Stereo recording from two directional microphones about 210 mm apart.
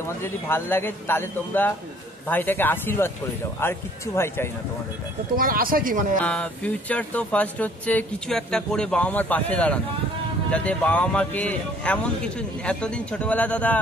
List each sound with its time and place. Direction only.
0.2 s speech: 10° left (ahead or behind)
5.3 s speech: 45° right (ahead or behind)
6.2 s speech: 5° left (ahead or behind)